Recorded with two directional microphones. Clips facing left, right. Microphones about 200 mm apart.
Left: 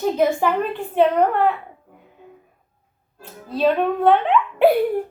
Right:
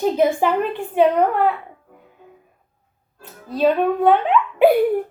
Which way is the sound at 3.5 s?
10° right (ahead or behind).